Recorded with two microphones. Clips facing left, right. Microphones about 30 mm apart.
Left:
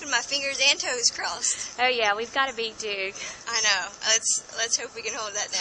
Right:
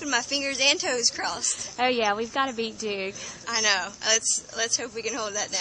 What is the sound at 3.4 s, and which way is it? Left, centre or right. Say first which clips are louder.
Speech: even; centre.